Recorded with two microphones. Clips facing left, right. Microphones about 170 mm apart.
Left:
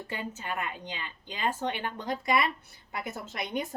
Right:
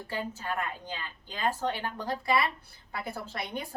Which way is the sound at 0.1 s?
20° left (ahead or behind).